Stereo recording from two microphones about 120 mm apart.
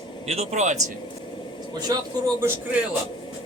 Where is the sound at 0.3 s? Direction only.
65° right (ahead or behind).